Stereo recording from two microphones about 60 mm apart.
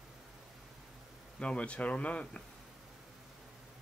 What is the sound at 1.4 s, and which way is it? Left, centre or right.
Speech, centre.